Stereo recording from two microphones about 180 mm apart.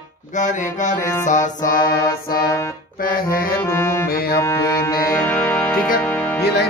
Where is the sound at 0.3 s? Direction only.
45° left (ahead or behind).